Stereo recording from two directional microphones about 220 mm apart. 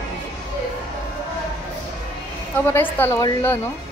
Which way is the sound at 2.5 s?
10° left (ahead or behind).